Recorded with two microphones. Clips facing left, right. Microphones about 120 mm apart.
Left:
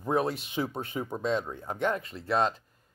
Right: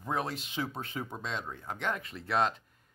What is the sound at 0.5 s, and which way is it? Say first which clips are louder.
Speech: left 4 dB; 5° left (ahead or behind).